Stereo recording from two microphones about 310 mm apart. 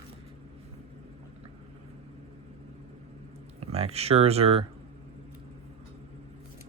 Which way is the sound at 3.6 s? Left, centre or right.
Centre.